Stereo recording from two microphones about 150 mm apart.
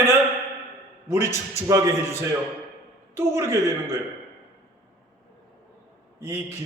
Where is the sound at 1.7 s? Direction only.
20° right (ahead or behind).